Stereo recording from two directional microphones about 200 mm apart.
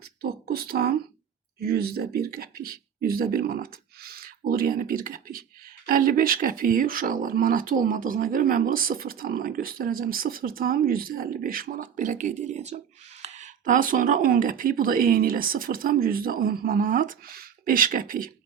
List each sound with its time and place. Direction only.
0.2 s speech: 50° right (ahead or behind)